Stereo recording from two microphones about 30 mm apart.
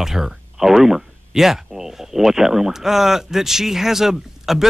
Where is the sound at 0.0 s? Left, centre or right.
Centre.